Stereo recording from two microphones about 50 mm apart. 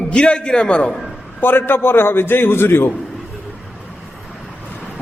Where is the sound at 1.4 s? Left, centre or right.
Left.